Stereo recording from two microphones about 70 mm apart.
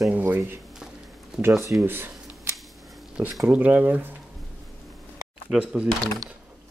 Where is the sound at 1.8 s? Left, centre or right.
Right.